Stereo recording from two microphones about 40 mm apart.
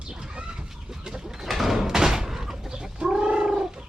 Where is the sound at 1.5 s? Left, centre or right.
Centre.